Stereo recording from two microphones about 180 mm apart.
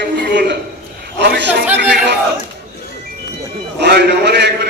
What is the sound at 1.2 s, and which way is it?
Speech, 70° right (ahead or behind).